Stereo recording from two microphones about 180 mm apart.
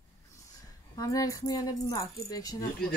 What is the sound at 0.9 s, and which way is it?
Speech, 20° left (ahead or behind).